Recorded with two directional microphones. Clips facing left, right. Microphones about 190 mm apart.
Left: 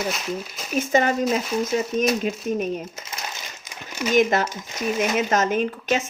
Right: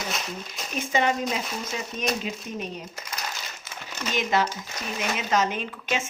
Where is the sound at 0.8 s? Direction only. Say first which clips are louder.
Left 4 dB; 45° left (ahead or behind).